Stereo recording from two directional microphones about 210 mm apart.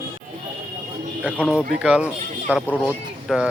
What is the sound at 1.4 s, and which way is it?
A man's voice, 5° right (ahead or behind).